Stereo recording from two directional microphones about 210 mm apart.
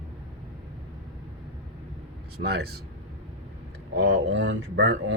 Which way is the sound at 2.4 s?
50° right (ahead or behind).